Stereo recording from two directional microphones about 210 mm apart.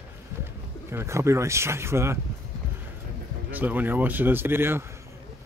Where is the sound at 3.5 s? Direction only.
10° right (ahead or behind).